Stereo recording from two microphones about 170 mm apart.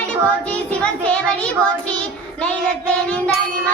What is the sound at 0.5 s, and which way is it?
Speech, 5° left (ahead or behind).